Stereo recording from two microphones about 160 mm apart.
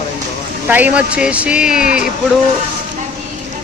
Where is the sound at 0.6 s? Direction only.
10° right (ahead or behind).